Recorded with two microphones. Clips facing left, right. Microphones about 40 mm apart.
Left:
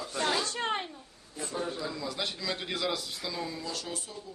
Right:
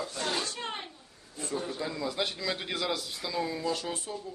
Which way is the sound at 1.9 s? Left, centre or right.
Centre.